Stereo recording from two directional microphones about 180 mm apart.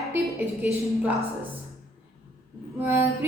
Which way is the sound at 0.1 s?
10° right (ahead or behind).